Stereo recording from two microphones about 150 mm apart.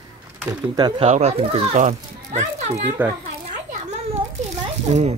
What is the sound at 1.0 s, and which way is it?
A child's voice, 45° right (ahead or behind).